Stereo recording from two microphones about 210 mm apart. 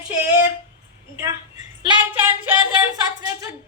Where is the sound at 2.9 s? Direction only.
15° right (ahead or behind).